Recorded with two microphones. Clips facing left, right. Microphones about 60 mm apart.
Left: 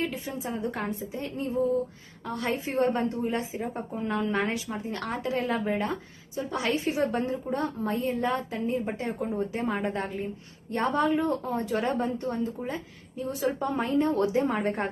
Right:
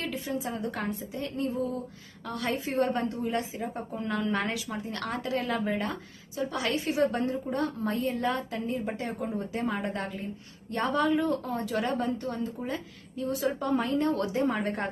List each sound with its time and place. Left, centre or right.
0.0 s a woman's voice: left